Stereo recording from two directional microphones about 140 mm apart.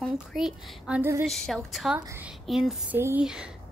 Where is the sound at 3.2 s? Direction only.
5° right (ahead or behind).